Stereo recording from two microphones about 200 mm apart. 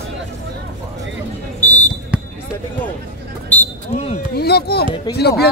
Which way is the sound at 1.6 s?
10° left (ahead or behind).